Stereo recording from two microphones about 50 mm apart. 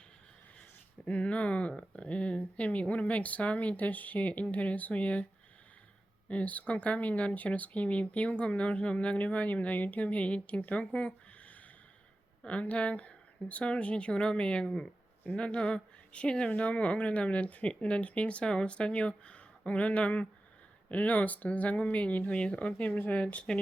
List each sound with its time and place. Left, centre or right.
1.0 s speech: left
6.2 s speech: left
12.5 s speech: left